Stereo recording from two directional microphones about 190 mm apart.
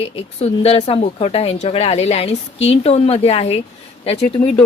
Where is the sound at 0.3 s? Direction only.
35° left (ahead or behind).